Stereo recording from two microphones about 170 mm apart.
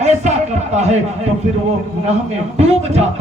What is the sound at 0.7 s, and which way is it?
Speech, 40° right (ahead or behind).